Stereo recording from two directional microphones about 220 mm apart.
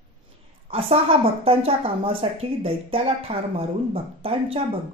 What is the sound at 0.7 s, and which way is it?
Speech, 25° right (ahead or behind).